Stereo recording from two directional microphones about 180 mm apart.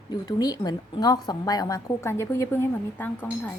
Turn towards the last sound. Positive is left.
turn(degrees=10)  # may be behind; listen again after turning